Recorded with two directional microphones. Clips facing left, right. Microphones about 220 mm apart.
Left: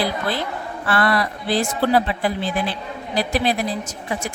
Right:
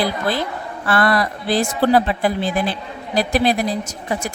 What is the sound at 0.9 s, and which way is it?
A woman's voice, 45° right (ahead or behind).